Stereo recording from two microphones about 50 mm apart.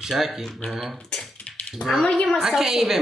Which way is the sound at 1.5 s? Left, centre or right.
Left.